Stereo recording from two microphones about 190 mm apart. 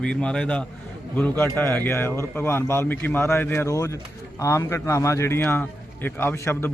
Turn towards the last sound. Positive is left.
turn(degrees=15)  # may be behind; listen again after turning